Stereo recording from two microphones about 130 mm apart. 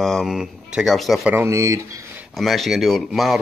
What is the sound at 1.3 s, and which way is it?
Speech, 25° right (ahead or behind).